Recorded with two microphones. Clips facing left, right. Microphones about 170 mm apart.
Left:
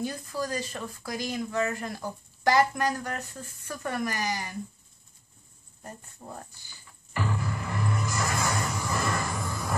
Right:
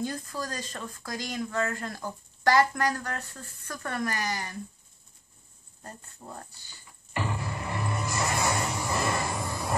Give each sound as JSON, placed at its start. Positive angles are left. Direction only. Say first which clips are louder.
{"t": 0.0, "sound": "speech", "louder": "left 1 dB", "side_deg": 10}
{"t": 5.9, "sound": "speech", "louder": "left 1 dB", "side_deg": 15}
{"t": 7.2, "sound": "music", "louder": "left 1 dB", "side_deg": -25}